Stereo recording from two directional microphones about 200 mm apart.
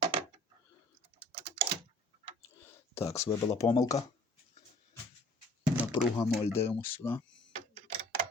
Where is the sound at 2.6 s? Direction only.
15° left (ahead or behind).